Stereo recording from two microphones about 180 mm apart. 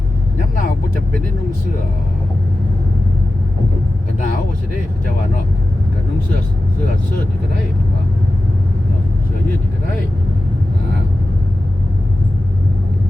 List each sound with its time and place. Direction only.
0.3 s vehicle: 45° left (ahead or behind)